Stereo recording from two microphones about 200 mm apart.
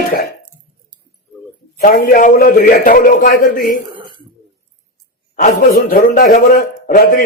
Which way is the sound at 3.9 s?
25° right (ahead or behind).